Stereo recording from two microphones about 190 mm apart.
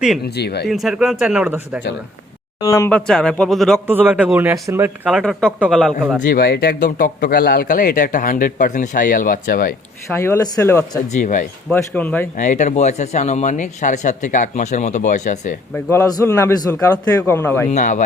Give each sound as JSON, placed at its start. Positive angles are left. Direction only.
{"t": 0.3, "sound": "speech", "side_deg": 60}
{"t": 0.7, "sound": "speech", "side_deg": 0}
{"t": 2.6, "sound": "a man's voice", "side_deg": 15}
{"t": 3.1, "sound": "speech", "side_deg": 5}
{"t": 3.8, "sound": "speech", "side_deg": -10}
{"t": 6.2, "sound": "speech", "side_deg": 55}
{"t": 10.2, "sound": "a man's voice", "side_deg": 15}
{"t": 11.1, "sound": "speech", "side_deg": 40}
{"t": 11.7, "sound": "a man's voice", "side_deg": 10}
{"t": 12.4, "sound": "speech", "side_deg": 40}
{"t": 15.7, "sound": "a man's voice", "side_deg": 15}
{"t": 17.7, "sound": "speech", "side_deg": 40}